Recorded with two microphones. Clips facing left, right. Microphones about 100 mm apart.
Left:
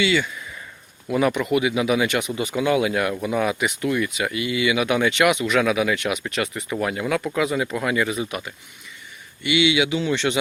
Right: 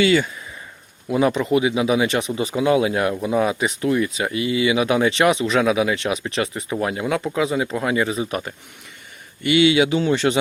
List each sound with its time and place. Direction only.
0.0 s speech: 40° right (ahead or behind)
1.0 s speech: 25° right (ahead or behind)
6.7 s speech: 20° right (ahead or behind); by 10.3 s 40° right (ahead or behind)